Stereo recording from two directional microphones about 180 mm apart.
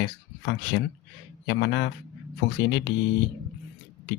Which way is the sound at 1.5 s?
75° left (ahead or behind).